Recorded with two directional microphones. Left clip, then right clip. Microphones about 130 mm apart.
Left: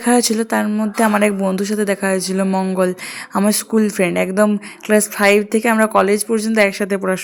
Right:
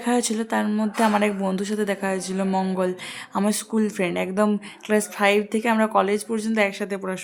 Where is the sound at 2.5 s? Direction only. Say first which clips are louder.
Left 5 dB; 20° left (ahead or behind).